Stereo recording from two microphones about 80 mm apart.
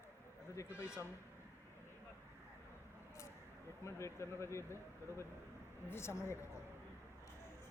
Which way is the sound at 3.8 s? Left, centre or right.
Left.